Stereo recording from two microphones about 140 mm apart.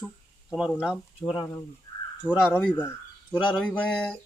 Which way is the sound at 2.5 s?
10° left (ahead or behind).